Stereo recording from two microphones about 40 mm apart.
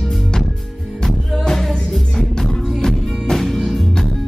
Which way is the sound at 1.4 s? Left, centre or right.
Centre.